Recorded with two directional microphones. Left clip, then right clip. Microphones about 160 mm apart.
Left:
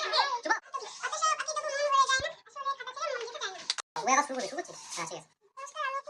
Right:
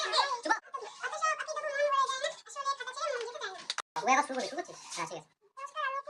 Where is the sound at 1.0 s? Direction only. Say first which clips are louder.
Left 3 dB; centre (ahead or behind).